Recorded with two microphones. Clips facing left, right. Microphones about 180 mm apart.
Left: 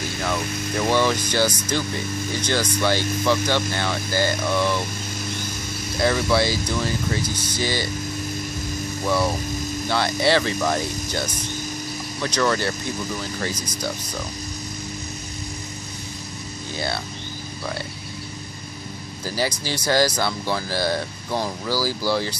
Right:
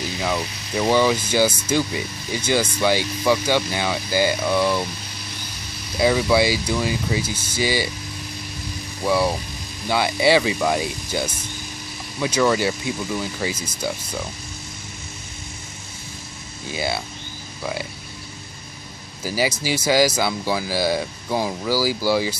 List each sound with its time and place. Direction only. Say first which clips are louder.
0.2 s speech: right 1 dB; 10° right (ahead or behind)
0.5 s speech: left 8 dB; 50° left (ahead or behind)
0.7 s speech: right 3 dB; 10° right (ahead or behind)
5.9 s speech: right 3 dB; 10° right (ahead or behind)
9.0 s speech: right 3 dB; 10° right (ahead or behind)
16.7 s speech: right 2 dB; 10° right (ahead or behind)
19.2 s speech: right 3 dB; 10° right (ahead or behind)